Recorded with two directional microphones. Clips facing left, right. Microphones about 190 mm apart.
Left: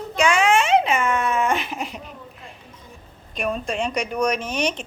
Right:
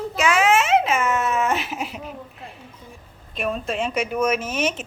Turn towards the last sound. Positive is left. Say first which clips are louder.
# right 1 dB
turn(degrees=-5)  # may be behind; listen again after turning